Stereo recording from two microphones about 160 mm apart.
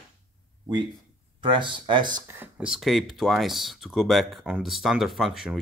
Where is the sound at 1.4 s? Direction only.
30° right (ahead or behind).